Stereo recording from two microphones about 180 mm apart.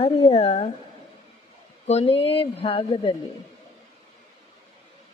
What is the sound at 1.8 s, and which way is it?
A woman's voice, 35° left (ahead or behind).